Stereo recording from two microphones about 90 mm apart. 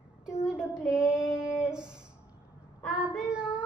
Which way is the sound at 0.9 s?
10° right (ahead or behind).